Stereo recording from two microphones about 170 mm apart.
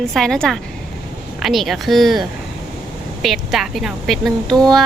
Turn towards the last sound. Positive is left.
turn(degrees=0)  # may be behind; listen again after turning